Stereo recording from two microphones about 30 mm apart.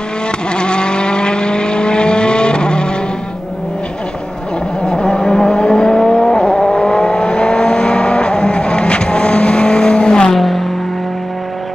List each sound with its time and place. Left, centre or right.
0.5 s vehicle: left
4.8 s vehicle: left
10.3 s a sound: centre